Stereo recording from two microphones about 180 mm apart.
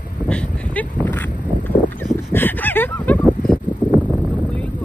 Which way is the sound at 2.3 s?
10° left (ahead or behind).